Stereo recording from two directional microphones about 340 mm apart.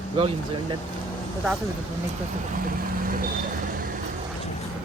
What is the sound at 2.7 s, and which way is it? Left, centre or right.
Vehicle, right.